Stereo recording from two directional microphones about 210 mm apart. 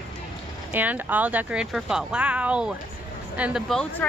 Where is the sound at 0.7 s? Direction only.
10° right (ahead or behind).